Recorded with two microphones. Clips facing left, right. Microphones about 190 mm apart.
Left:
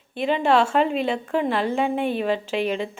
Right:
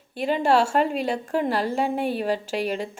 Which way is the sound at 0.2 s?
45° right (ahead or behind).